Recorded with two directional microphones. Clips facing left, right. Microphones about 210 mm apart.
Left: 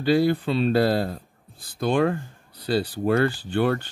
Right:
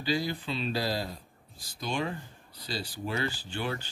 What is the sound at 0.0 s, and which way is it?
Speech, 55° left (ahead or behind).